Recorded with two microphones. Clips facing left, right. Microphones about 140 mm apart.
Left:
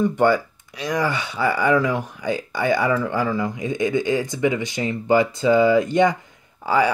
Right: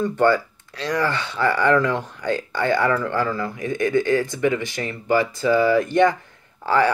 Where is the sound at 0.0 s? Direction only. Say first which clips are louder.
Left 1 dB; 15° left (ahead or behind).